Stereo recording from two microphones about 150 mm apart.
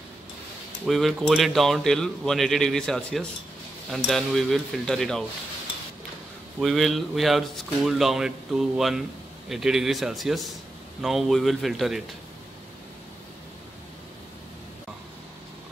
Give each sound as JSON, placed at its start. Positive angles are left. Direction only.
{"t": 0.8, "sound": "speech", "side_deg": 0}
{"t": 6.6, "sound": "speech", "side_deg": 0}